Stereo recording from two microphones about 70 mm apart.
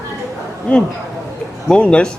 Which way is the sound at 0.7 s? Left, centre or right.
Centre.